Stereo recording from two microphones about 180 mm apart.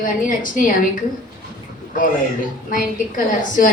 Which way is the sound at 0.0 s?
50° left (ahead or behind).